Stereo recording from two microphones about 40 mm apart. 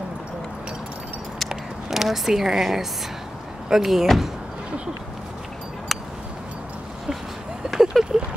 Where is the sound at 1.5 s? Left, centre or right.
Centre.